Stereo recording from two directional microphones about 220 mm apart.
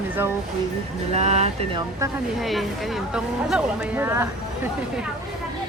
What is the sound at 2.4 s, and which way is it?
Speech, centre (ahead or behind).